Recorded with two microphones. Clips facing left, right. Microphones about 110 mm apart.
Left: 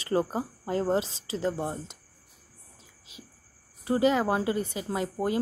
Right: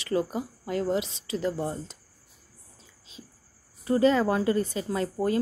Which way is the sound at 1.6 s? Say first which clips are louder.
Right 1 dB; 20° left (ahead or behind).